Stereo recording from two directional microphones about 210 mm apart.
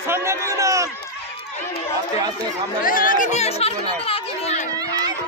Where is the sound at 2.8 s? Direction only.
40° left (ahead or behind).